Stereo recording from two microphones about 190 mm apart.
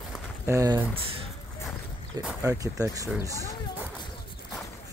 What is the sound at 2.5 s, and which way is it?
Speech, 15° right (ahead or behind).